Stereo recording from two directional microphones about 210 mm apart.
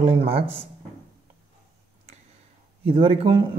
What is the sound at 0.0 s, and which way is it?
Speech, 25° right (ahead or behind).